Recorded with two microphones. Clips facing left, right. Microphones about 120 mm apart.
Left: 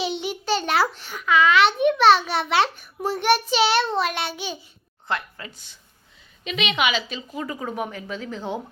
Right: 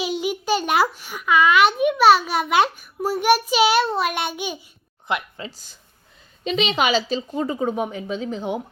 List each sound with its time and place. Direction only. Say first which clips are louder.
0.0 s a child's voice: right 3 dB; 10° right (ahead or behind)
5.5 s a woman's voice: right 3 dB; 40° right (ahead or behind); by 8.6 s 15° right (ahead or behind)